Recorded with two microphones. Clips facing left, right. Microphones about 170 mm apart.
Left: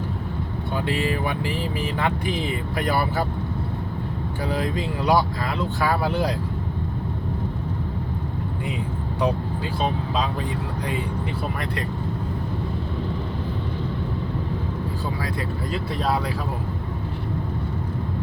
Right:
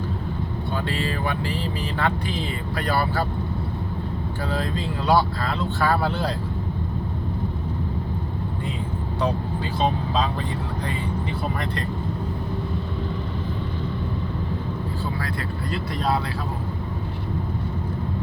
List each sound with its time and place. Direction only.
0.9 s speech: 15° left (ahead or behind)
4.4 s speech: 15° left (ahead or behind)